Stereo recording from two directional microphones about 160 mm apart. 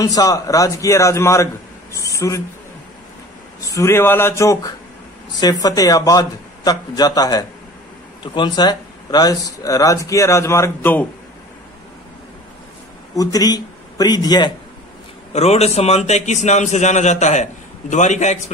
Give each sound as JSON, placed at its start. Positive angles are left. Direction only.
{"t": 0.0, "sound": "speech", "side_deg": 20}
{"t": 3.6, "sound": "speech", "side_deg": 20}
{"t": 13.1, "sound": "a man's voice", "side_deg": 20}
{"t": 15.3, "sound": "a man's voice", "side_deg": 40}